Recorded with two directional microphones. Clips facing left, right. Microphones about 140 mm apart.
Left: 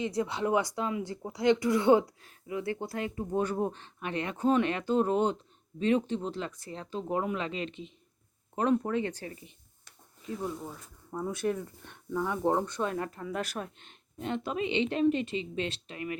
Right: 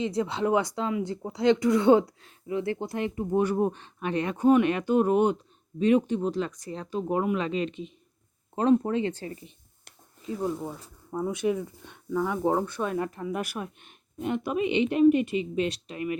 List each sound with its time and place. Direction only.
0.0 s speech: 25° right (ahead or behind)
8.5 s speech: 25° right (ahead or behind)
10.4 s speech: 30° right (ahead or behind)
11.1 s speech: 15° right (ahead or behind)